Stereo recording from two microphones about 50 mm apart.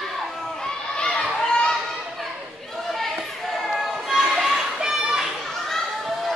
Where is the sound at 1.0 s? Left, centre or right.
Centre.